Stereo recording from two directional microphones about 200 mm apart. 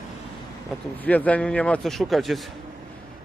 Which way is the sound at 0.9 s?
5° left (ahead or behind).